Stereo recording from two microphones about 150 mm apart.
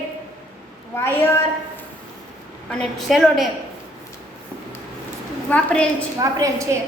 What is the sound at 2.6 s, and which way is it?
Speech, 5° left (ahead or behind).